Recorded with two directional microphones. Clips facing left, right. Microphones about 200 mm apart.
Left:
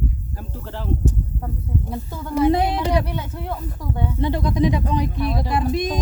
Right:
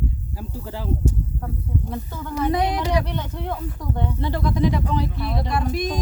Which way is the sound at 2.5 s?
25° left (ahead or behind).